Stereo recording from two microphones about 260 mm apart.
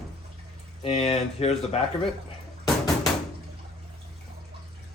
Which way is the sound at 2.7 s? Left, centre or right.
Centre.